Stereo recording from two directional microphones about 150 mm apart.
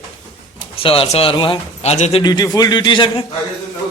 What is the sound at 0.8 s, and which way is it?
Speech, 40° left (ahead or behind).